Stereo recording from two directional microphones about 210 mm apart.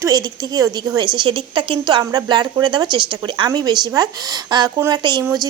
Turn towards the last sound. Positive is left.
turn(degrees=-15)  # may be behind; listen again after turning